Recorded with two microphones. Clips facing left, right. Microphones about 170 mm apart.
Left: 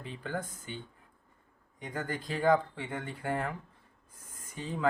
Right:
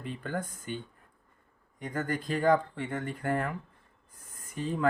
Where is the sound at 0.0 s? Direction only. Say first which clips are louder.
Right 2 dB; 50° right (ahead or behind).